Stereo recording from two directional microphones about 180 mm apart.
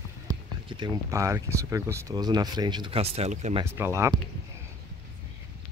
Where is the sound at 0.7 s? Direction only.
15° right (ahead or behind); by 3.6 s 35° right (ahead or behind).